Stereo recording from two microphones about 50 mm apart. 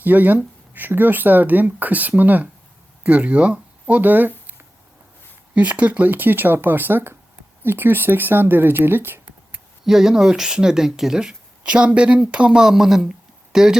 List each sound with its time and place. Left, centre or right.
0.0 s speech: right
5.5 s speech: right
9.8 s speech: centre